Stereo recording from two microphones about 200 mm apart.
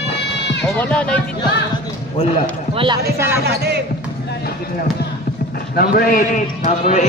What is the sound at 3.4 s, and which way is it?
Speech, 55° right (ahead or behind).